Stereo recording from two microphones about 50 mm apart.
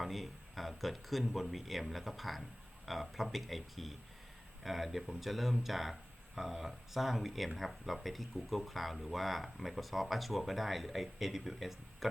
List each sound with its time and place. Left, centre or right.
0.0 s speech: centre